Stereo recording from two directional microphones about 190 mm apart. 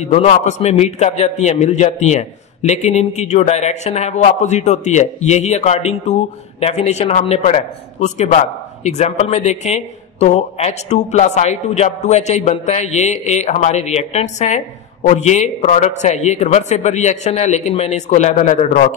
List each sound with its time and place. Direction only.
0.0 s a man's voice: 35° left (ahead or behind)